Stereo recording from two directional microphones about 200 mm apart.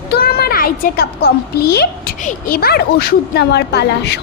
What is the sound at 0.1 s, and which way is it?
A child's voice, 50° left (ahead or behind).